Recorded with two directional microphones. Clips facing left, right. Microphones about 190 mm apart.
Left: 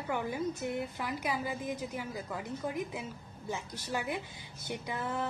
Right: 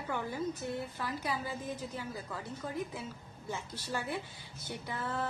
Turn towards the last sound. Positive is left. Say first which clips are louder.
# left 2 dB
turn(degrees=15)  # may be behind; listen again after turning